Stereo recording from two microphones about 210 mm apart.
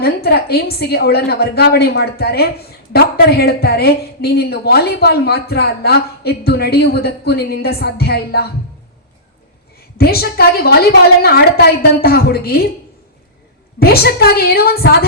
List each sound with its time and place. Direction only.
0.0 s a woman's voice: 50° left (ahead or behind)
10.0 s a woman's voice: 50° left (ahead or behind)
13.7 s a woman's voice: 50° left (ahead or behind)